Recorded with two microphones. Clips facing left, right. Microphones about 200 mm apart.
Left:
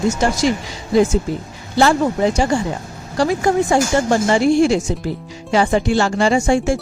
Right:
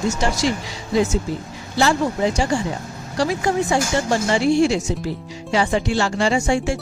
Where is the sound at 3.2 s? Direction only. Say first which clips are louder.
Left 4 dB; 50° left (ahead or behind).